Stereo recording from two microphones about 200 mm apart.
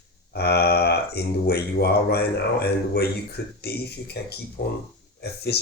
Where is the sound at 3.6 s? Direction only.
55° left (ahead or behind).